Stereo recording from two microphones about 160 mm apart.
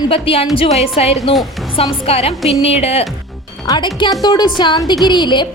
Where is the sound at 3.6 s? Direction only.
30° left (ahead or behind).